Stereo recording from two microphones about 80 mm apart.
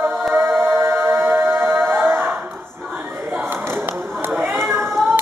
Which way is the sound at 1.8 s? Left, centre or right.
Right.